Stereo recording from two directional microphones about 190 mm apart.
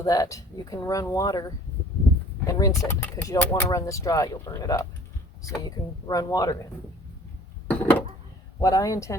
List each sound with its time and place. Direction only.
0.0 s speech: 20° left (ahead or behind)
7.7 s a sound: 10° left (ahead or behind)
8.6 s speech: 20° left (ahead or behind)